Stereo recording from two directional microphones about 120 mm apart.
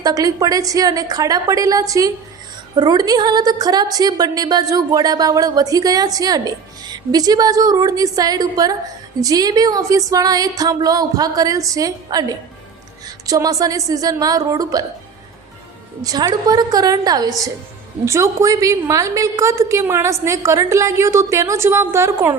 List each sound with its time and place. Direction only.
0.0 s a woman's voice: 30° right (ahead or behind)
13.2 s a woman's voice: 30° right (ahead or behind)
16.0 s a woman's voice: 30° right (ahead or behind)